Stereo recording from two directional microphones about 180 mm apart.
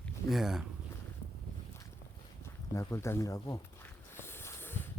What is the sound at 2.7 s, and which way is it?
Speech, 15° left (ahead or behind).